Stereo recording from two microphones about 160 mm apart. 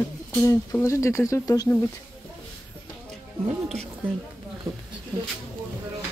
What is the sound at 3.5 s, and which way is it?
Speech, 40° right (ahead or behind).